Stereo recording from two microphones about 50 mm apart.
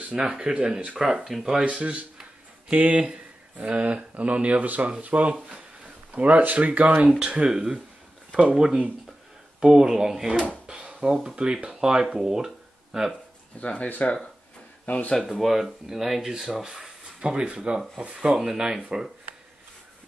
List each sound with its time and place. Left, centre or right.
0.1 s speech: centre
0.9 s speech: centre; by 6.9 s right
7.1 s speech: centre
10.5 s drawer open or close: centre
11.2 s speech: centre
13.1 s speech: left
15.1 s speech: centre